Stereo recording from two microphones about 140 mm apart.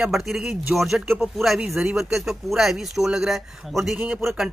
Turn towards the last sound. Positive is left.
turn(degrees=0)  # may be behind; listen again after turning